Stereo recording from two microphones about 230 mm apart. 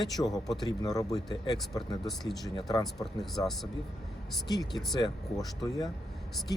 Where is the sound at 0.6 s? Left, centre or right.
Centre.